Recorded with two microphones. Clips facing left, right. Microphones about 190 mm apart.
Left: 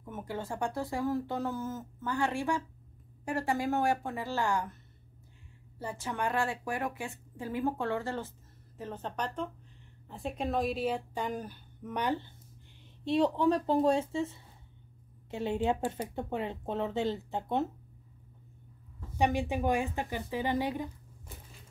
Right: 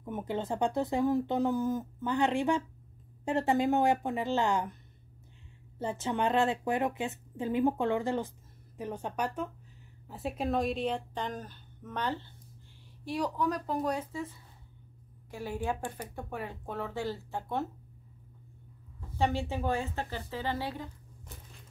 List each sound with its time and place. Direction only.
0.0 s speech: 20° right (ahead or behind)
5.8 s a woman's voice: 20° right (ahead or behind); by 17.6 s 20° left (ahead or behind)
19.1 s a woman's voice: 15° left (ahead or behind)